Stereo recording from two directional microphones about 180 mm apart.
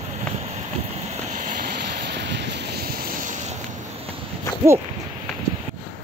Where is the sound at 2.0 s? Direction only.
70° right (ahead or behind); by 3.3 s 50° right (ahead or behind).